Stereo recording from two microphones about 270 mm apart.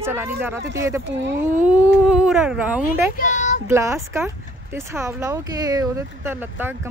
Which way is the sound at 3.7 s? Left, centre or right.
Centre.